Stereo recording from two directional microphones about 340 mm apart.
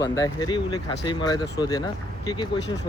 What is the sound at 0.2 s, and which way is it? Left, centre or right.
Speech, centre.